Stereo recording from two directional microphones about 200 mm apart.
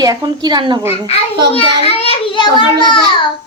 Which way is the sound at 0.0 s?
20° right (ahead or behind).